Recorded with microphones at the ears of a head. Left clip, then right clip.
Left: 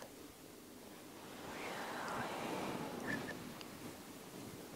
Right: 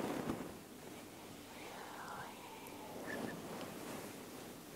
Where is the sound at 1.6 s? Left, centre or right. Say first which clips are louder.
Left 6 dB; left.